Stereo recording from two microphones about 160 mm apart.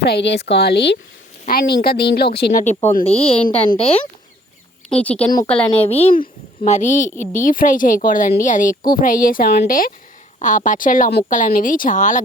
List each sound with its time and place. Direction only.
0.0 s speech: 90° left
1.5 s a woman's voice: 80° left
2.6 s speech: 45° left (ahead or behind)
4.9 s speech: 5° left (ahead or behind)
5.8 s a woman's voice: 40° left (ahead or behind); by 11.3 s 70° left (ahead or behind)
11.3 s speech: 55° left (ahead or behind)